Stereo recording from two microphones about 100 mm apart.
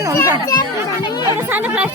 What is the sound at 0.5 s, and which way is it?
Speech, 45° left (ahead or behind).